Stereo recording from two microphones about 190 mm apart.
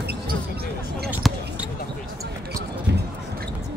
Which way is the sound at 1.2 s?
Centre (ahead or behind).